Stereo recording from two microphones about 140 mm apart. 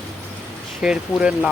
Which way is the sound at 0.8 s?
5° right (ahead or behind).